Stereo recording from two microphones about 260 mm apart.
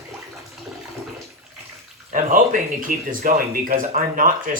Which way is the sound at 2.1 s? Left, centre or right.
Right.